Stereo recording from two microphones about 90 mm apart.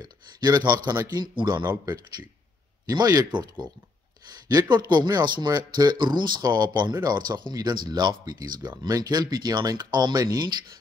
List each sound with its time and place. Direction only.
0.0 s speech: 50° right (ahead or behind)
2.9 s speech: 45° right (ahead or behind)